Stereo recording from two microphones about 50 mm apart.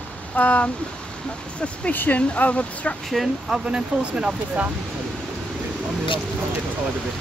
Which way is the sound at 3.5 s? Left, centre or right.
Right.